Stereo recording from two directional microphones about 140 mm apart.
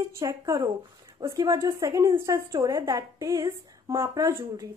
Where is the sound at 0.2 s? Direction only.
20° right (ahead or behind).